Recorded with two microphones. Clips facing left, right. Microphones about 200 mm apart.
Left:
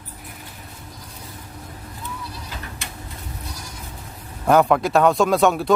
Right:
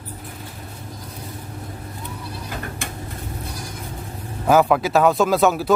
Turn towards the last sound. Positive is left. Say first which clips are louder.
# even
turn(degrees=0)  # may be behind; listen again after turning